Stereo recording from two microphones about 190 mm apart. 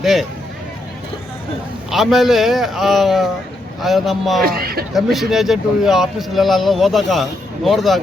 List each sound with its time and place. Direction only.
0.0 s speech: centre (ahead or behind)
1.9 s speech: centre (ahead or behind)
4.4 s speech: 50° right (ahead or behind)
4.9 s speech: centre (ahead or behind)